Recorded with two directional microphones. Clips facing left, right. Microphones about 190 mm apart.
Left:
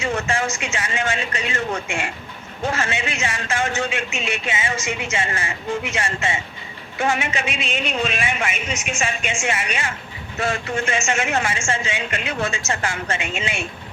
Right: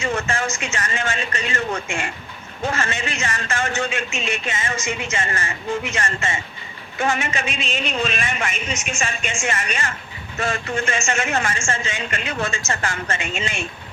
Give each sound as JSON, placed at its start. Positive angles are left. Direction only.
{"t": 0.0, "sound": "a man's voice", "side_deg": 10}
{"t": 2.7, "sound": "a man's voice", "side_deg": 5}